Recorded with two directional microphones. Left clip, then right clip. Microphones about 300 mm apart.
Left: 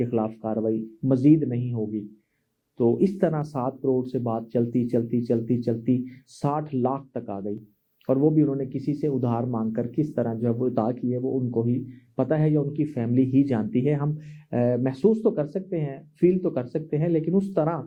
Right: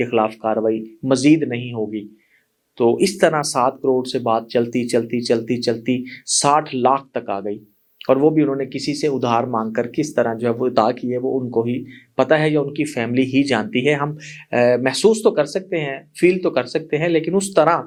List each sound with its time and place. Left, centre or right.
0.0 s speech: centre
3.0 s speech: centre
11.2 s speech: right
11.6 s speech: centre